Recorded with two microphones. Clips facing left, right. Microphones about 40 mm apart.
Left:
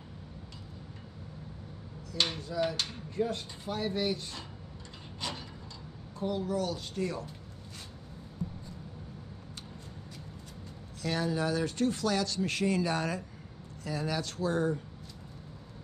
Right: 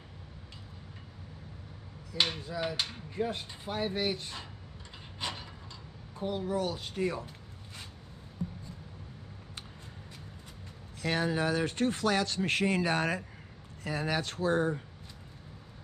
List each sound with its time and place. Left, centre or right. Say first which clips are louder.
2.1 s speech: left 1 dB; centre
5.2 s a sound: right 1 dB; right
6.1 s speech: even; right
11.0 s speech: right 1 dB; right